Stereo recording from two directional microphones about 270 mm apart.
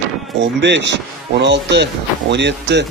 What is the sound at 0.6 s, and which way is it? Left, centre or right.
Speech, right.